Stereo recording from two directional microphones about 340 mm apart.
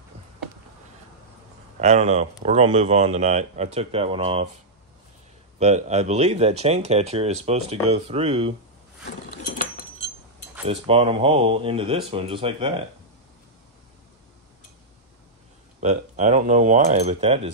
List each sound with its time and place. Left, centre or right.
1.8 s speech: centre
5.6 s speech: centre
9.5 s chink: left
10.7 s speech: centre
15.8 s speech: right